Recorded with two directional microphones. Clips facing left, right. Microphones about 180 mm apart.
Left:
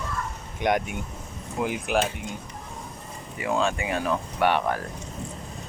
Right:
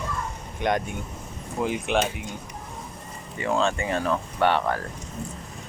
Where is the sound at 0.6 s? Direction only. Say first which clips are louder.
Left 1 dB; 10° left (ahead or behind).